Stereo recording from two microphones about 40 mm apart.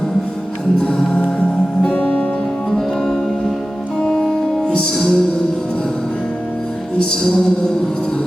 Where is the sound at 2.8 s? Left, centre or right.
Centre.